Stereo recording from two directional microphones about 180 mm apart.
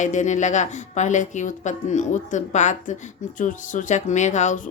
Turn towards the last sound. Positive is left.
turn(degrees=40)  # may be behind; listen again after turning